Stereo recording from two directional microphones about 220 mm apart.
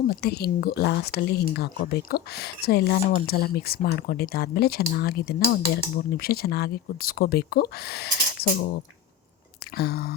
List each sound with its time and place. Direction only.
0.1 s speech: 45° left (ahead or behind)
9.7 s speech: 45° left (ahead or behind)